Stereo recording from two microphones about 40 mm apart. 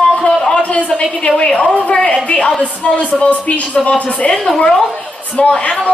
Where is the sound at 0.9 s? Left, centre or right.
Left.